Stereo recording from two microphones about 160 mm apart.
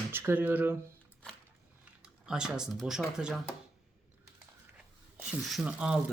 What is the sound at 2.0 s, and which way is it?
Speech, 5° right (ahead or behind).